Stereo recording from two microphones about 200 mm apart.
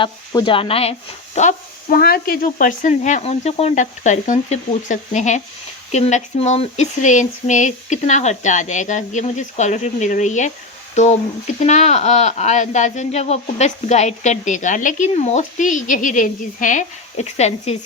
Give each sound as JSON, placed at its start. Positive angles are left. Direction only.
{"t": 0.0, "sound": "speech", "side_deg": 25}
{"t": 1.4, "sound": "speech", "side_deg": 45}